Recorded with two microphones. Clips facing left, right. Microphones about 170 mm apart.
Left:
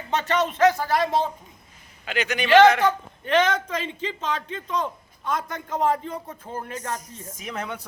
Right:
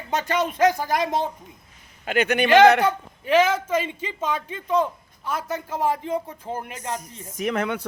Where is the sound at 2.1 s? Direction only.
55° right (ahead or behind).